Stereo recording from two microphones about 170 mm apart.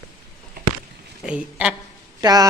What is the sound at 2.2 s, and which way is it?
Speech, 20° right (ahead or behind).